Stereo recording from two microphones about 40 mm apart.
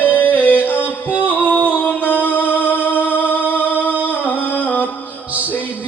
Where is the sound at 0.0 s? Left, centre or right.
Left.